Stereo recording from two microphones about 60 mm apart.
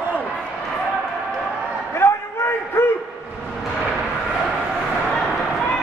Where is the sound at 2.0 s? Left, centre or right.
Left.